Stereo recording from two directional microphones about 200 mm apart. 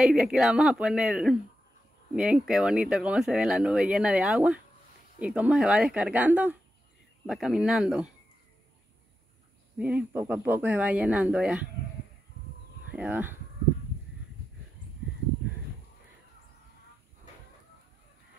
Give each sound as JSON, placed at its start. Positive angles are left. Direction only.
{"t": 0.0, "sound": "speech", "side_deg": -5}
{"t": 9.8, "sound": "speech", "side_deg": -5}
{"t": 12.9, "sound": "speech", "side_deg": -10}